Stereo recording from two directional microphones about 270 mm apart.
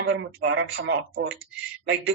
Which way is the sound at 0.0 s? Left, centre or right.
Right.